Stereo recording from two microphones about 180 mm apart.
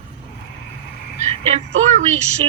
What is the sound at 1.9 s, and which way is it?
Speech, 40° right (ahead or behind).